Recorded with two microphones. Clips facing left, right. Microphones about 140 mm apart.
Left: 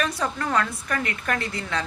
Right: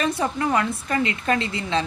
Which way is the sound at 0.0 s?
25° right (ahead or behind).